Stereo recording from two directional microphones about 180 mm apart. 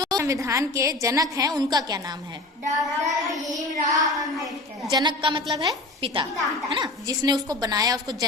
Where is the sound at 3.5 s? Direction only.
20° right (ahead or behind).